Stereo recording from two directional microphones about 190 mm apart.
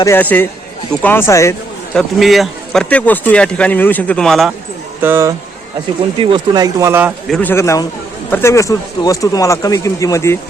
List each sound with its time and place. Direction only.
0.0 s speech: 10° left (ahead or behind)
1.9 s speech: centre (ahead or behind)
5.0 s speech: 15° right (ahead or behind)
6.1 s speech: 25° right (ahead or behind)
7.3 s speech: 5° left (ahead or behind)
7.5 s speech: 15° left (ahead or behind)